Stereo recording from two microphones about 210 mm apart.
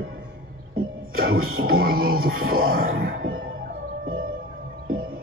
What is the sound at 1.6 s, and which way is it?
Music, 45° right (ahead or behind).